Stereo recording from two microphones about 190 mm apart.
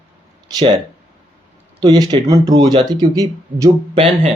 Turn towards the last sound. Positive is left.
turn(degrees=-20)  # may be behind; listen again after turning